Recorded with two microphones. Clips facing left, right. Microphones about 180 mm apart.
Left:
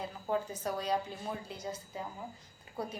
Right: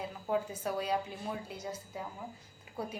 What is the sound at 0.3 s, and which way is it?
A woman's voice, 5° right (ahead or behind).